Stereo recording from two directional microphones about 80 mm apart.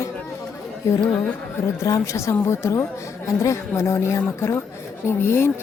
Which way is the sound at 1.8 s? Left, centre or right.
Left.